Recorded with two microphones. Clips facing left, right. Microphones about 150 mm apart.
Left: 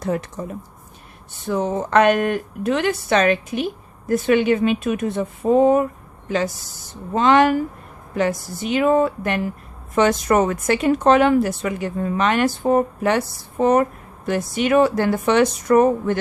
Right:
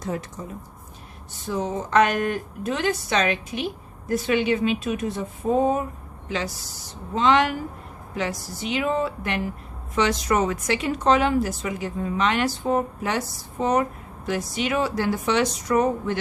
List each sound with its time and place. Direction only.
0.0 s speech: 65° left (ahead or behind)
6.2 s a woman's voice: 45° left (ahead or behind)